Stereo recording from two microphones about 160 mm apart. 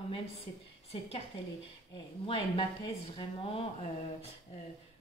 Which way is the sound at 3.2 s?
35° left (ahead or behind).